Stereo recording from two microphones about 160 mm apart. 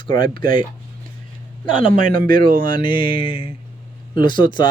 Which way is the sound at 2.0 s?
60° right (ahead or behind).